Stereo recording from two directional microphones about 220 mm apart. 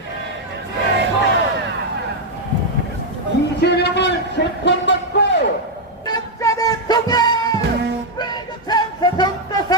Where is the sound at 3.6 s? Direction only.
50° left (ahead or behind).